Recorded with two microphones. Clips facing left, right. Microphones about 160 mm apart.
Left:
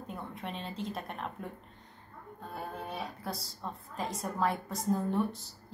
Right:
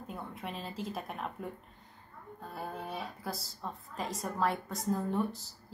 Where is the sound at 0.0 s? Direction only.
Centre (ahead or behind).